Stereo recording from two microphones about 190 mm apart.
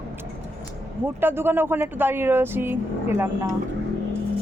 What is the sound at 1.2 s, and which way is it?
Speech, 10° right (ahead or behind).